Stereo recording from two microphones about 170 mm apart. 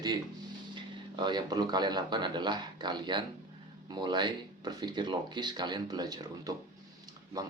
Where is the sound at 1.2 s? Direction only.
25° right (ahead or behind).